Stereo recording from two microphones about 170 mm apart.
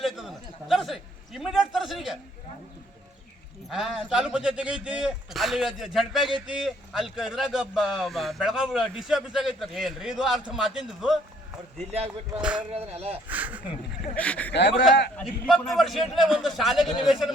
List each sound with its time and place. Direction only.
0.0 s a man's voice: centre (ahead or behind)
3.7 s speech: centre (ahead or behind)
12.5 s speech: 35° right (ahead or behind)
13.2 s speech: 10° right (ahead or behind)
14.2 s speech: 10° left (ahead or behind)
14.5 s speech: 90° left
15.1 s speech: centre (ahead or behind)